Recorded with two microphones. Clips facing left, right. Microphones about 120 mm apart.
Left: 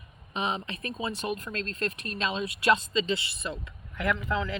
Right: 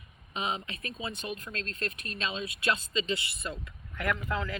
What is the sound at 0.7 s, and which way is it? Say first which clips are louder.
Speech: left 5 dB; 40° left (ahead or behind).